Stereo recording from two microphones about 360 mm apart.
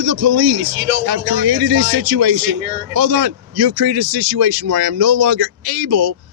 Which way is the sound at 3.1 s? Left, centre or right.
Right.